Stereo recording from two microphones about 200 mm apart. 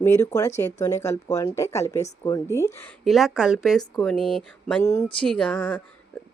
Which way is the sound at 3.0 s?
Centre (ahead or behind).